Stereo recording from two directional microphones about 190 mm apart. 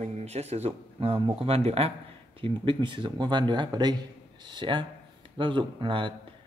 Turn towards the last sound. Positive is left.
turn(degrees=-25)  # may be behind; listen again after turning